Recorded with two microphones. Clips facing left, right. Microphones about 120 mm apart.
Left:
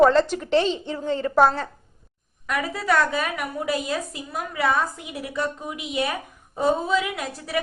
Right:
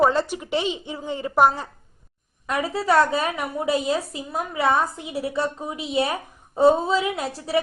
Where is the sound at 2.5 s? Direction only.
30° right (ahead or behind).